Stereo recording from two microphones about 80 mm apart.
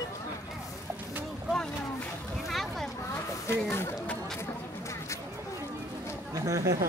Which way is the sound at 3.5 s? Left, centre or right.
Left.